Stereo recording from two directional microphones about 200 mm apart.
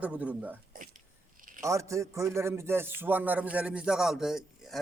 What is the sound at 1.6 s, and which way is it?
A man's voice, 15° right (ahead or behind).